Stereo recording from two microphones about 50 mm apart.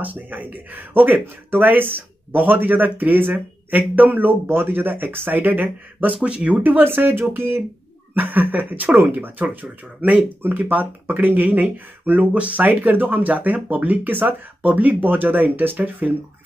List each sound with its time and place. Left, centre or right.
0.0 s speech: right
3.3 s speech: right
6.2 s speech: right
6.6 s speech: right
8.1 s speech: right